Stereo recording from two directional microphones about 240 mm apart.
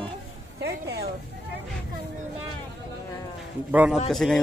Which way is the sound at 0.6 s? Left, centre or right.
Right.